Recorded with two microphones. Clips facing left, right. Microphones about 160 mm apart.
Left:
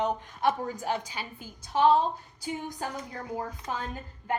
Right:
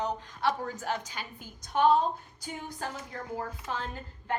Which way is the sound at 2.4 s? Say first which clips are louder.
Left 5 dB; 10° left (ahead or behind).